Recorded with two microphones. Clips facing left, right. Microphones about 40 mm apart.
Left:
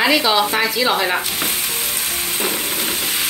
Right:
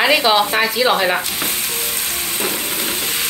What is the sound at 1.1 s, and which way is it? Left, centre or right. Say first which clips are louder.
Sizzle: even; centre.